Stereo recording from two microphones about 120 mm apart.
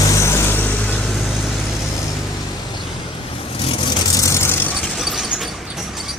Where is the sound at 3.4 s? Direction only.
50° left (ahead or behind); by 4.7 s 20° left (ahead or behind).